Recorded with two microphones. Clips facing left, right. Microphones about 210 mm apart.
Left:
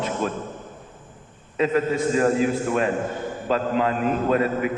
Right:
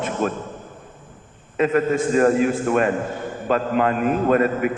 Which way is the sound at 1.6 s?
55° right (ahead or behind).